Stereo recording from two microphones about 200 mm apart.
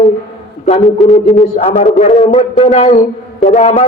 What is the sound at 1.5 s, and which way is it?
Music, 35° left (ahead or behind).